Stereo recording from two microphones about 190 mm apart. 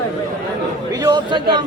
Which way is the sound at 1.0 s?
25° right (ahead or behind).